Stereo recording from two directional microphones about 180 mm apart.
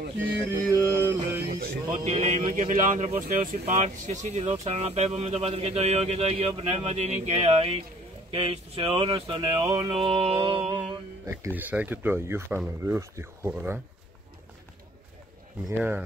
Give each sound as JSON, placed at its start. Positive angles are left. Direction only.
{"t": 0.2, "sound": "mantra", "side_deg": -10}
{"t": 2.0, "sound": "speech", "side_deg": -45}
{"t": 10.0, "sound": "speech", "side_deg": -35}
{"t": 10.7, "sound": "speech", "side_deg": -15}
{"t": 15.7, "sound": "speech", "side_deg": -10}